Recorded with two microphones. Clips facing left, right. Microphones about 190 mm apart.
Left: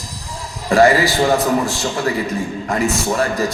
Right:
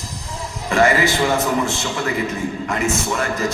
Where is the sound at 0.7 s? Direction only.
35° left (ahead or behind).